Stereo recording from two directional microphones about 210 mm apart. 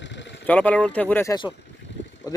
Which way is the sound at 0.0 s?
60° left (ahead or behind).